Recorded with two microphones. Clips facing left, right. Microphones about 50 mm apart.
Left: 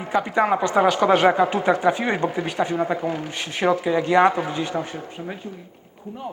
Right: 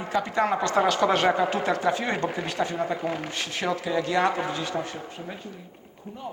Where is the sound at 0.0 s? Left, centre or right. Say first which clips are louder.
Left 4 dB; centre.